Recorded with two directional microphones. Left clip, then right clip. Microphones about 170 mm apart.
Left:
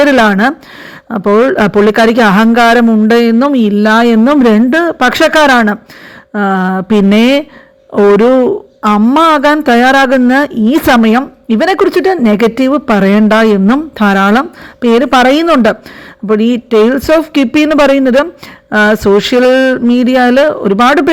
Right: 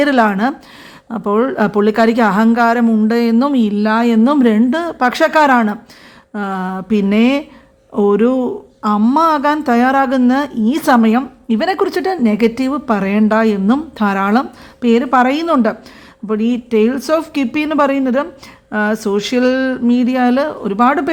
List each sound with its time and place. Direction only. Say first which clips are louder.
0.0 s a woman's voice: left 6 dB; 25° left (ahead or behind)